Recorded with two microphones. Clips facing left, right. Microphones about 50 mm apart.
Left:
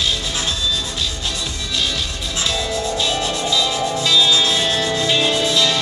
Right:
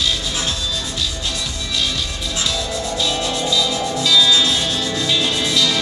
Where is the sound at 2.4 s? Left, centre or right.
Left.